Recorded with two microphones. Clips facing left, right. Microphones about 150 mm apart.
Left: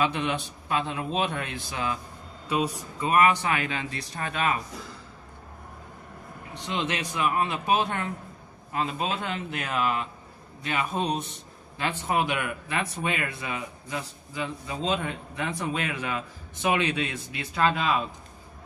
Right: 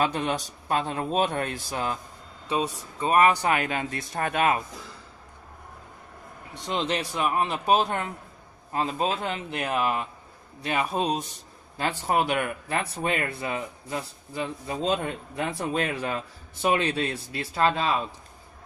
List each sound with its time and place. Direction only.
0.0 s a man's voice: 40° right (ahead or behind)
3.0 s a man's voice: 35° right (ahead or behind); by 4.6 s 50° right (ahead or behind)
6.6 s speech: 35° right (ahead or behind)
10.9 s speech: 5° right (ahead or behind)
11.8 s speech: 40° right (ahead or behind)